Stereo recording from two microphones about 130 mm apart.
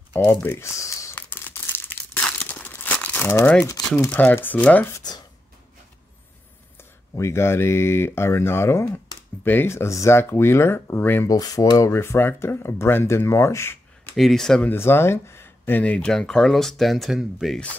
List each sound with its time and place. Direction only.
0.1 s crumpling: 15° left (ahead or behind)
4.1 s speech: 15° left (ahead or behind)
4.9 s speech: 30° left (ahead or behind)
6.8 s speech: 20° left (ahead or behind)
11.2 s speech: 30° left (ahead or behind)
14.1 s speech: centre (ahead or behind)
14.7 s speech: 20° left (ahead or behind); by 17.6 s centre (ahead or behind)